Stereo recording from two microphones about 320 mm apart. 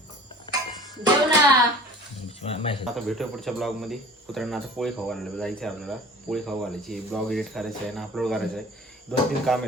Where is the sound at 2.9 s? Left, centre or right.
Centre.